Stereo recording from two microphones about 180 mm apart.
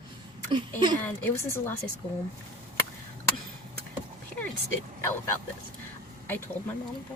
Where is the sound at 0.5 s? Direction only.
25° right (ahead or behind).